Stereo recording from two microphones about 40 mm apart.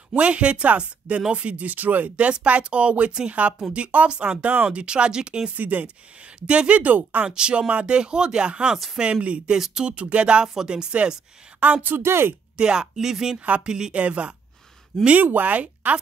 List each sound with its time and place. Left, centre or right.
0.1 s speech: right
1.7 s speech: right
4.7 s speech: right
5.5 s speech: right
6.4 s speech: right
7.2 s speech: right
11.6 s speech: right
12.0 s speech: right
12.5 s speech: centre
13.9 s speech: right
14.9 s speech: centre
15.2 s speech: right